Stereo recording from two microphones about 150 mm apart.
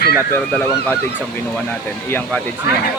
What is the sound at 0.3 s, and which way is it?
Speech, 10° left (ahead or behind).